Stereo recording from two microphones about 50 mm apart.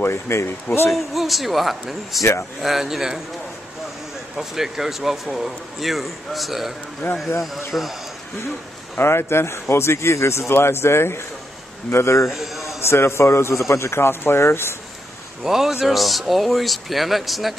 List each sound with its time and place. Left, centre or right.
0.0 s speech: left
0.8 s speech: centre
4.4 s speech: centre
7.0 s a man's voice: left
7.7 s speech: centre
8.9 s a man's voice: left
12.3 s a sound: centre
12.8 s a man's voice: left
15.4 s speech: centre